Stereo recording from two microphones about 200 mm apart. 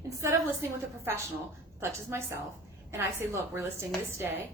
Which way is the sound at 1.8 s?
15° right (ahead or behind).